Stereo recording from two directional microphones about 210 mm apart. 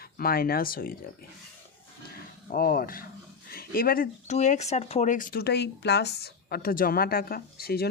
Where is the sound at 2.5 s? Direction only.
45° left (ahead or behind).